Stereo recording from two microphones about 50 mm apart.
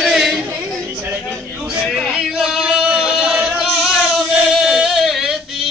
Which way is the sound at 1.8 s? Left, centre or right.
Centre.